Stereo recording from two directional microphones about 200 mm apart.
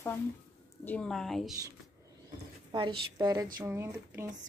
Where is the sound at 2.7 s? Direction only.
25° right (ahead or behind).